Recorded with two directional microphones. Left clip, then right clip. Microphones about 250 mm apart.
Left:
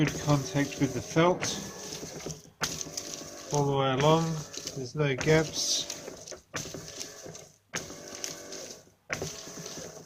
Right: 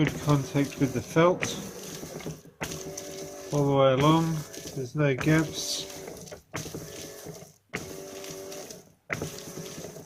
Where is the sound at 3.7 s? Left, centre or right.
Centre.